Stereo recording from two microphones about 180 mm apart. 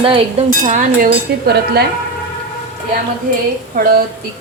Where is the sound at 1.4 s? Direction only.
65° right (ahead or behind).